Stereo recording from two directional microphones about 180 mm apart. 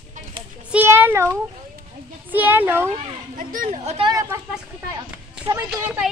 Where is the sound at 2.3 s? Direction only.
10° right (ahead or behind).